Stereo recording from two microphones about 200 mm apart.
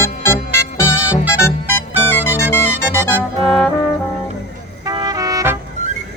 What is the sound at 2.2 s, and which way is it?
Music, 10° left (ahead or behind).